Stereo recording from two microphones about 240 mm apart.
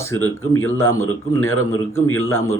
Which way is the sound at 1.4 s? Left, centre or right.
Left.